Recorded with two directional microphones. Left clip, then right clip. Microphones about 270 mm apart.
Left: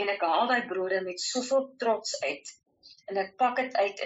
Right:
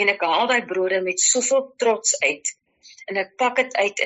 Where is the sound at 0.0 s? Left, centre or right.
Right.